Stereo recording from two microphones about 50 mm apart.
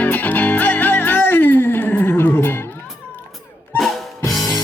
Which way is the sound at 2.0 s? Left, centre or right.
Left.